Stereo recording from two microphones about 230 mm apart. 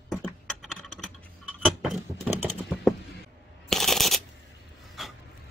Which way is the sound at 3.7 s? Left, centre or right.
Centre.